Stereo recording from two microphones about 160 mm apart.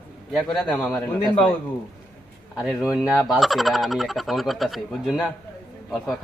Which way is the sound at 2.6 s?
5° right (ahead or behind).